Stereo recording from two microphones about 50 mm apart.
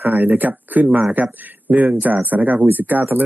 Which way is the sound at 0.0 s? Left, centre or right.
Right.